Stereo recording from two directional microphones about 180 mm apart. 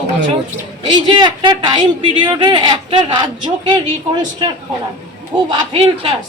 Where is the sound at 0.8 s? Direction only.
25° right (ahead or behind).